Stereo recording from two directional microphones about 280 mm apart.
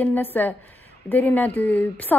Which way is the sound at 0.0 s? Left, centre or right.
Centre.